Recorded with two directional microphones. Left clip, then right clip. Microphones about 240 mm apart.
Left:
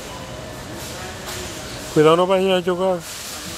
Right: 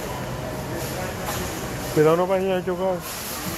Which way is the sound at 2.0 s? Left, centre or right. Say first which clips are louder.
Left 5 dB; left.